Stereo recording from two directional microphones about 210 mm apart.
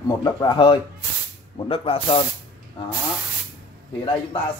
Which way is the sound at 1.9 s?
25° left (ahead or behind).